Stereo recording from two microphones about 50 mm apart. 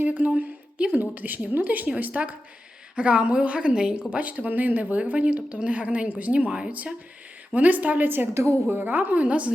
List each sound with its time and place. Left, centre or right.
0.0 s a woman's voice: right; by 4.0 s centre
4.1 s a woman's voice: right
8.3 s a woman's voice: right
8.7 s a woman's voice: right